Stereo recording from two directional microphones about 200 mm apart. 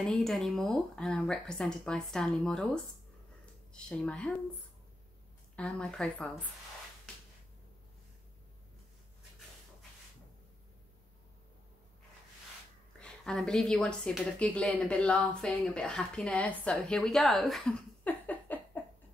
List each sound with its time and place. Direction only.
0.0 s speech: centre (ahead or behind)
5.6 s speech: 5° left (ahead or behind)
13.0 s speech: centre (ahead or behind)